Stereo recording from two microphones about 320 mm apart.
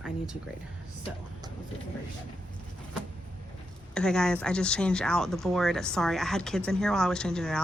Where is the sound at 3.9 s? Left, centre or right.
Centre.